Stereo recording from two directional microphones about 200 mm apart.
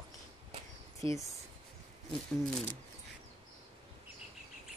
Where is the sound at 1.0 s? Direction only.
25° right (ahead or behind).